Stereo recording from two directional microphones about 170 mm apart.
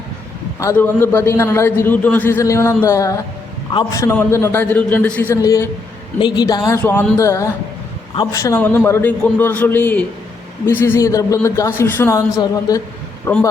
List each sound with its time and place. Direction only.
0.6 s a man's voice: 15° left (ahead or behind)
5.3 s a woman's voice: 20° left (ahead or behind)